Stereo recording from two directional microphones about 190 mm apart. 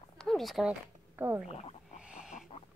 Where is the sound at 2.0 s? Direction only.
5° right (ahead or behind).